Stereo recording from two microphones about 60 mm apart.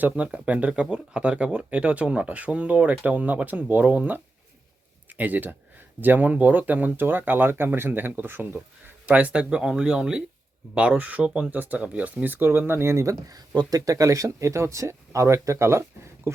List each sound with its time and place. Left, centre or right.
0.0 s speech: right
9.0 s speech: right
13.2 s speech: right